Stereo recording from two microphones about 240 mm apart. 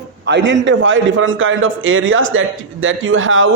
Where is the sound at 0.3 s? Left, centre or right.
Right.